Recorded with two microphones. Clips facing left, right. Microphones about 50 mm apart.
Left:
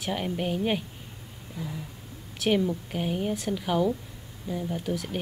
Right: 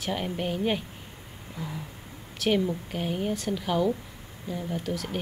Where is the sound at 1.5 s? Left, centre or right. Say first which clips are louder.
Even; right.